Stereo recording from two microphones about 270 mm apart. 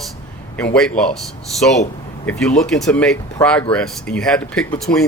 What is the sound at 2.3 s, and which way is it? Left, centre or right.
Speech, centre.